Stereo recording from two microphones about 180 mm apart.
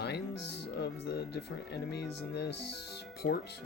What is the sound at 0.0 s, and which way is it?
Speech, 70° left (ahead or behind).